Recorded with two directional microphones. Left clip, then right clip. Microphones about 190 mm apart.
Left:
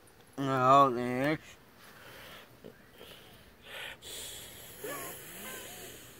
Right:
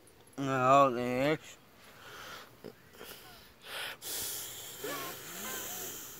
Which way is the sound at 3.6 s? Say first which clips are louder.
Right 3 dB; 25° right (ahead or behind).